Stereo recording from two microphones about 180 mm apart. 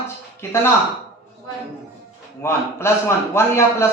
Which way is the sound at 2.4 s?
15° left (ahead or behind).